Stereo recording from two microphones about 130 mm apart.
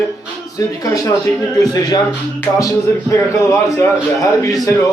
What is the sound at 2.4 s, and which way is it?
A man's voice, 25° left (ahead or behind).